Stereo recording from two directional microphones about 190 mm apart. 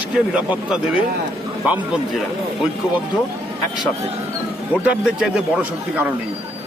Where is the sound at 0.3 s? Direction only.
5° right (ahead or behind).